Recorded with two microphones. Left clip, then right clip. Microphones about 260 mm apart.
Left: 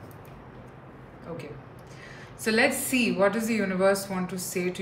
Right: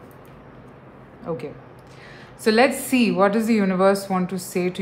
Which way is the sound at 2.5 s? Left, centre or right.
Centre.